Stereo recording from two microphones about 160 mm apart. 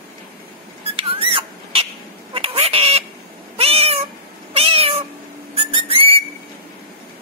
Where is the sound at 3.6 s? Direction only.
40° right (ahead or behind).